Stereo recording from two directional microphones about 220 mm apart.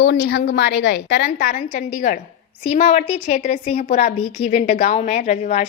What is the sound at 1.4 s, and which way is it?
A woman's voice, 35° left (ahead or behind).